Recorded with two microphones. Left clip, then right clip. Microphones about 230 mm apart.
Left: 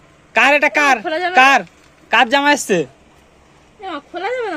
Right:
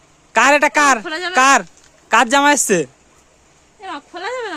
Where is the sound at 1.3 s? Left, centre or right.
Right.